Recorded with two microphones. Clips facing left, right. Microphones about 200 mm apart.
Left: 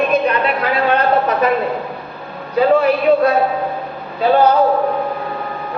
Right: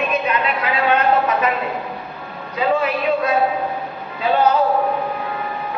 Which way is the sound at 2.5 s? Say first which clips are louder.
Left 6 dB; 35° left (ahead or behind).